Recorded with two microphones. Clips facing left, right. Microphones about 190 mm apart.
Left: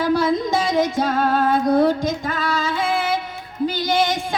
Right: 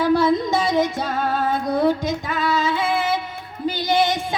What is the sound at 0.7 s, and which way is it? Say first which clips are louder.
Music: left 2 dB; 45° left (ahead or behind).